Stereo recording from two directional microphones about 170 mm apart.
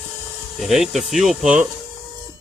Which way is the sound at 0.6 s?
Centre (ahead or behind).